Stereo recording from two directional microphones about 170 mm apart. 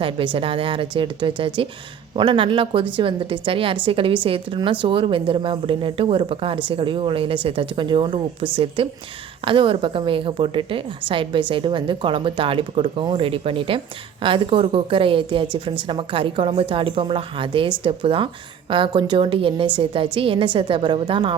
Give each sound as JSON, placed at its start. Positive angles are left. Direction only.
{"t": 0.3, "sound": "a woman's voice", "side_deg": -30}